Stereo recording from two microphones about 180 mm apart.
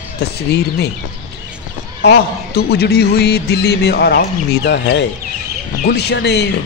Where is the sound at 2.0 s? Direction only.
65° left (ahead or behind).